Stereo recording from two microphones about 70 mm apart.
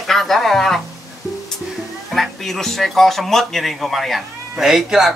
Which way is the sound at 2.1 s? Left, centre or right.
Centre.